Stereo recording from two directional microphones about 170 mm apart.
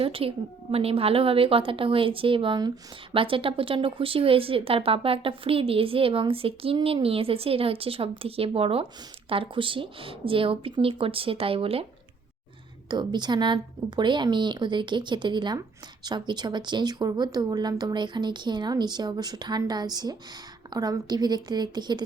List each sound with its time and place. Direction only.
0.0 s a woman's voice: 35° right (ahead or behind)
12.9 s speech: 25° right (ahead or behind)